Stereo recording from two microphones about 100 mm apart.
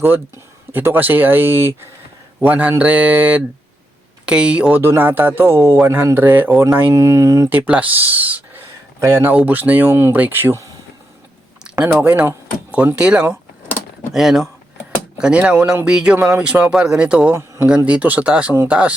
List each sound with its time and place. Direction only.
0.7 s speech: 20° right (ahead or behind)
4.8 s speech: 20° right (ahead or behind)
7.5 s speech: 15° right (ahead or behind)
8.6 s speech: 25° right (ahead or behind)
11.6 s a sound: 10° right (ahead or behind)
11.9 s speech: 20° right (ahead or behind)
17.3 s speech: 25° right (ahead or behind)
17.8 s speech: 15° right (ahead or behind)